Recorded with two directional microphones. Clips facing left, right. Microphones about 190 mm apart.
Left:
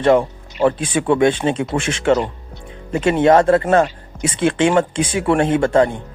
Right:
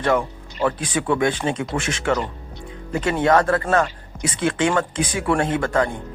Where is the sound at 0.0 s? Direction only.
25° left (ahead or behind).